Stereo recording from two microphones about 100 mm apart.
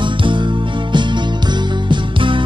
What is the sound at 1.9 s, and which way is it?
Music, 55° right (ahead or behind).